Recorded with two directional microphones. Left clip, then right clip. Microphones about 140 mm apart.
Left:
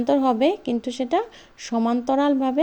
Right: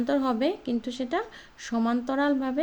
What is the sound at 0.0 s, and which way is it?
Speech, 35° left (ahead or behind).